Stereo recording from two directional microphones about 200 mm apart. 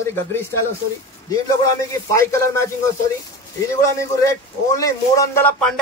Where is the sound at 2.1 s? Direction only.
15° left (ahead or behind).